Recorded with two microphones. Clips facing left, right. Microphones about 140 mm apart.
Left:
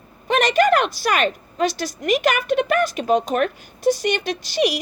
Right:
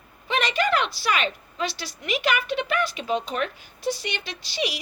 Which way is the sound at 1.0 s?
50° left (ahead or behind).